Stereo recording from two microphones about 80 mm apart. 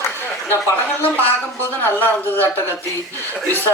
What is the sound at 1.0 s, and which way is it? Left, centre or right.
A man's voice, left.